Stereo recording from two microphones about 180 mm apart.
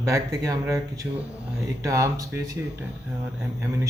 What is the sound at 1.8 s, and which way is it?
Speech, 20° right (ahead or behind).